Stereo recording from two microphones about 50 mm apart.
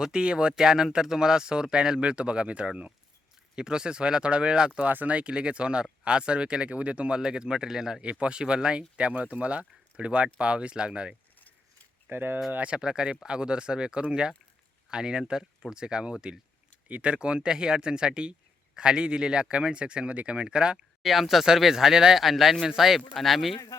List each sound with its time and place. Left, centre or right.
0.0 s speech: centre
4.8 s speech: right
5.1 s speech: right
12.0 s speech: right
12.5 s speech: right
12.7 s speech: centre
21.0 s speech: centre